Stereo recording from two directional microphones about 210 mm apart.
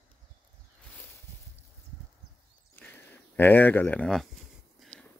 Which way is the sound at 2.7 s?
10° left (ahead or behind).